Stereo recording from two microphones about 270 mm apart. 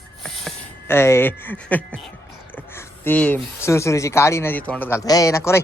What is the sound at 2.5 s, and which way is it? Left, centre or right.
Speech, centre.